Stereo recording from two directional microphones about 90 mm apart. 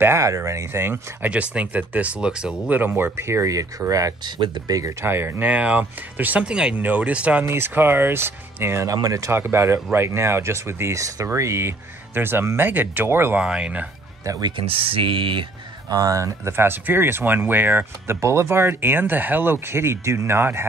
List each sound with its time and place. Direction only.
0.0 s speech: 35° right (ahead or behind)
1.3 s speech: 15° right (ahead or behind)
2.8 s speech: 25° right (ahead or behind); by 4.9 s 40° right (ahead or behind)
5.0 s speech: 25° right (ahead or behind)
7.4 s speech: 25° right (ahead or behind)
8.8 s speech: 40° right (ahead or behind); by 13.4 s 25° right (ahead or behind)
13.4 s speech: 10° right (ahead or behind)
14.2 s speech: 40° right (ahead or behind)
14.7 s speech: 90° right; by 15.4 s 70° right (ahead or behind)
15.9 s speech: 40° right (ahead or behind)